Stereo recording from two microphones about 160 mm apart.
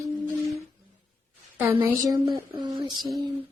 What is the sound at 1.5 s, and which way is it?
Speech, 10° right (ahead or behind).